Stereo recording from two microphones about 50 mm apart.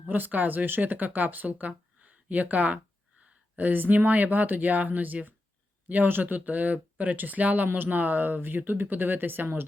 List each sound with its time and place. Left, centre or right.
0.1 s speech: right